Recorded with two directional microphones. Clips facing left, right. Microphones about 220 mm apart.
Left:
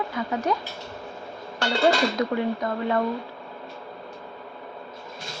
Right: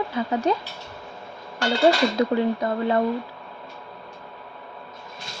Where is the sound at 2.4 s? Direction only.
30° right (ahead or behind).